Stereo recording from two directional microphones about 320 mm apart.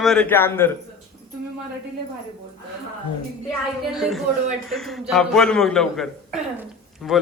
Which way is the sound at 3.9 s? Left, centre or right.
Centre.